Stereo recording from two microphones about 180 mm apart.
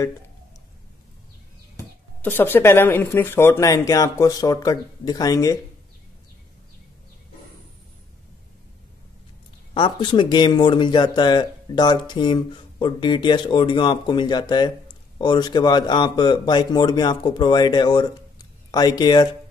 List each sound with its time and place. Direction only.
2.2 s speech: 10° left (ahead or behind)
9.8 s speech: 25° left (ahead or behind)